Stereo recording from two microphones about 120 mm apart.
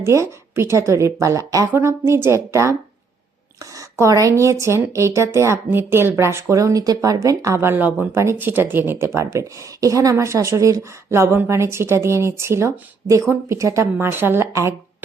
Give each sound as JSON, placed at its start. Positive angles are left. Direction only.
{"t": 0.0, "sound": "speech", "side_deg": -20}